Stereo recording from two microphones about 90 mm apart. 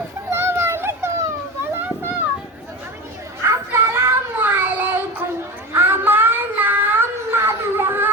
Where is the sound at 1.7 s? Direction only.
20° right (ahead or behind).